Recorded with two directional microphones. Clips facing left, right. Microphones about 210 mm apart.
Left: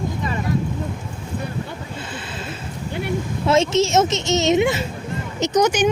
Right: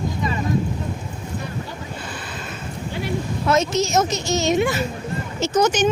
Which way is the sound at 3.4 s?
25° left (ahead or behind).